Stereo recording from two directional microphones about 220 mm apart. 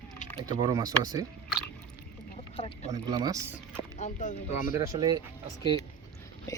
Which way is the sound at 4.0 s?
35° left (ahead or behind).